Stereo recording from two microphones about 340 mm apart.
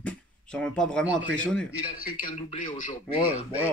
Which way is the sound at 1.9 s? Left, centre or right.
Left.